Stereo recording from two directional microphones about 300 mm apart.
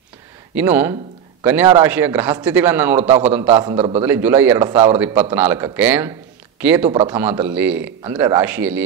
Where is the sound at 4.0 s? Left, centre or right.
Centre.